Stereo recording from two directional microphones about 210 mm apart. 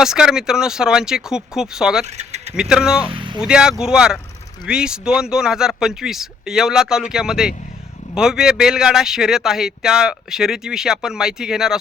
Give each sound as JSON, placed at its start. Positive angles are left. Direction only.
{"t": 0.0, "sound": "speech", "side_deg": 0}
{"t": 2.0, "sound": "speech", "side_deg": -30}
{"t": 2.6, "sound": "speech", "side_deg": -5}
{"t": 3.1, "sound": "speech", "side_deg": -25}
{"t": 3.4, "sound": "speech", "side_deg": -5}